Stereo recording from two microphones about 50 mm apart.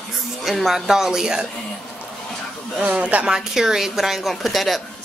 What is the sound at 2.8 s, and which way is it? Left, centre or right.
Speech, right.